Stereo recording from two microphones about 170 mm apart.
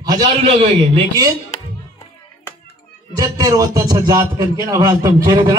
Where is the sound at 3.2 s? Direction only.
20° right (ahead or behind).